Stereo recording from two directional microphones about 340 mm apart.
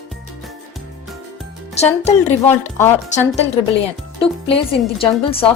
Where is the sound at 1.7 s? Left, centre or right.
Centre.